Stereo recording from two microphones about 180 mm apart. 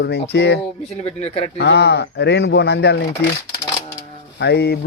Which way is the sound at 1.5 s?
70° left (ahead or behind).